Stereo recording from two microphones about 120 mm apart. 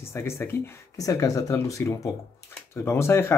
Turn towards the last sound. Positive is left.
turn(degrees=20)  # may be behind; listen again after turning